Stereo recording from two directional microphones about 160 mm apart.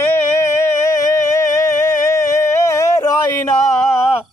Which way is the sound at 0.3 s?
20° left (ahead or behind).